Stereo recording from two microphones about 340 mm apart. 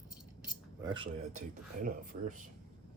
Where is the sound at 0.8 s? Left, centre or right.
Centre.